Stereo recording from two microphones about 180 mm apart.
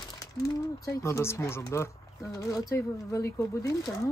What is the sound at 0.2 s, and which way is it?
Speech, 20° left (ahead or behind).